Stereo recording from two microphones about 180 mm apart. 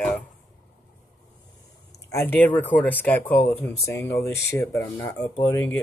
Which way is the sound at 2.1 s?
10° left (ahead or behind).